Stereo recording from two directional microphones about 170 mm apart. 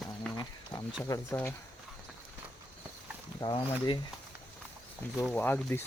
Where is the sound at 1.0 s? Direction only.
20° left (ahead or behind).